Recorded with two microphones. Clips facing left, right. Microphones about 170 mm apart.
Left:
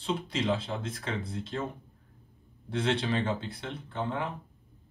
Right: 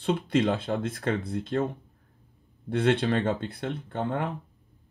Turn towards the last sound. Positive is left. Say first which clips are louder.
# right 4 dB
turn(degrees=-55)  # may be behind; listen again after turning